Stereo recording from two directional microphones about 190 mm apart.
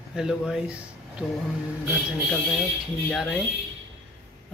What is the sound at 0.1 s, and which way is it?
A man's voice, 5° right (ahead or behind).